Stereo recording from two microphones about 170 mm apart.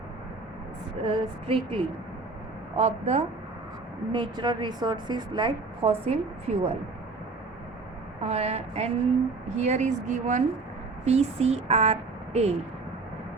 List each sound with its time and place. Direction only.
1.0 s speech: 30° right (ahead or behind)
4.1 s a woman's voice: 25° right (ahead or behind)
8.2 s a woman's voice: 40° right (ahead or behind)